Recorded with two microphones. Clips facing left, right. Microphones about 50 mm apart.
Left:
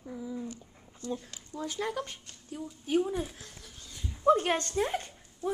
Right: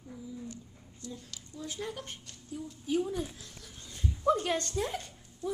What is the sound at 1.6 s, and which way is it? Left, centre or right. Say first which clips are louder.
Speech: left 5 dB; left.